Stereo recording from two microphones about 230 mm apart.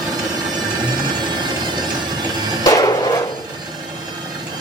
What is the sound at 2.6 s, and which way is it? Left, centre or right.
Music, centre.